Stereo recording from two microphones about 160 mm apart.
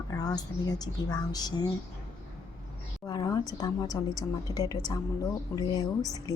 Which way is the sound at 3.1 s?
25° left (ahead or behind).